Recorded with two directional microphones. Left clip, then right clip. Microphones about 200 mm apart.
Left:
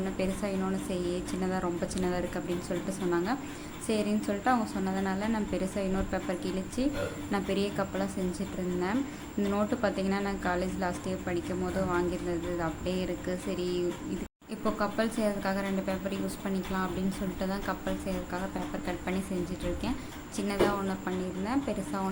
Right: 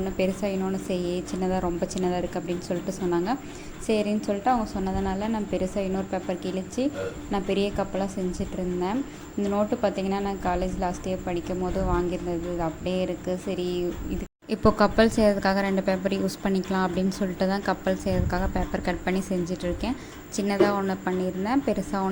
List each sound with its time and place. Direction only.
0.2 s a woman's voice: 15° right (ahead or behind)
14.5 s a woman's voice: 35° right (ahead or behind)